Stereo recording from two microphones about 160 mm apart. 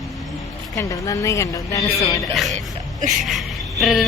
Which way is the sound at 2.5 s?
50° right (ahead or behind).